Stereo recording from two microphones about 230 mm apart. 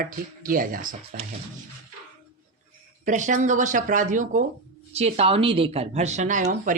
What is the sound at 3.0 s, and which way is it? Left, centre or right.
Speech, right.